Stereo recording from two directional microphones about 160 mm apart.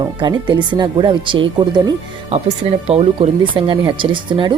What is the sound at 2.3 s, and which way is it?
Speech, 40° right (ahead or behind).